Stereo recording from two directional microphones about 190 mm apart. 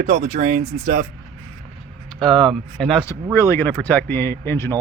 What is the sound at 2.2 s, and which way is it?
Speech, 5° left (ahead or behind).